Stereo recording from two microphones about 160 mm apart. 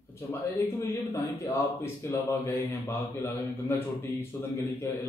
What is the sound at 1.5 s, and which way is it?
Speech, 15° left (ahead or behind).